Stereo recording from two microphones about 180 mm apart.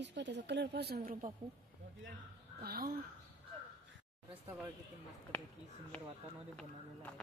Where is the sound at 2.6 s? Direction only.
55° right (ahead or behind).